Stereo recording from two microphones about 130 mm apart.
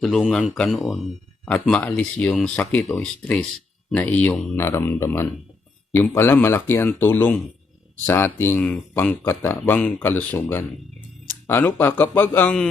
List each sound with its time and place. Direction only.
0.0 s speech: centre (ahead or behind)